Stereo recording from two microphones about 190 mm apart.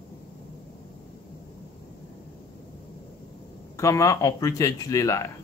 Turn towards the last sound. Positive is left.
turn(degrees=15)  # may be behind; listen again after turning